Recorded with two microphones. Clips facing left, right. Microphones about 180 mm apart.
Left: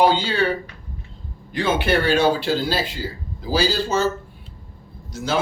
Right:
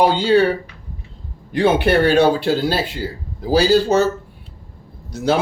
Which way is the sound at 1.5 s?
60° right (ahead or behind).